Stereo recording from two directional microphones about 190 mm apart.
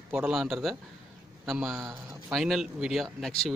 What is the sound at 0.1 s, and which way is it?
Speech, 5° right (ahead or behind).